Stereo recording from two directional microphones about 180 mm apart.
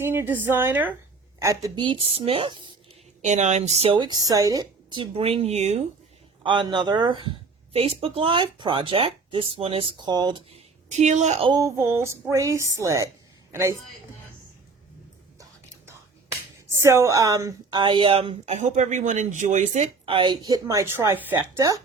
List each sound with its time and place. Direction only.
0.0 s a woman's voice: 10° right (ahead or behind)
3.2 s a woman's voice: 40° right (ahead or behind)
6.4 s a woman's voice: 25° right (ahead or behind)
10.9 s a woman's voice: 40° right (ahead or behind)
11.4 s a woman's voice: 20° right (ahead or behind)
16.6 s a woman's voice: 15° right (ahead or behind)